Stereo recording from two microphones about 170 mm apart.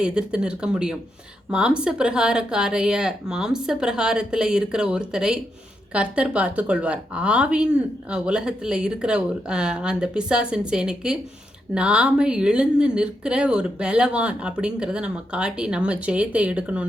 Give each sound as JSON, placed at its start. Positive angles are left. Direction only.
{"t": 0.0, "sound": "a woman's voice", "side_deg": -5}